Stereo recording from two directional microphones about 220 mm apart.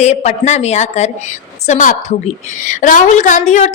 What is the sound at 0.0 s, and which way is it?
A woman's voice, 30° left (ahead or behind).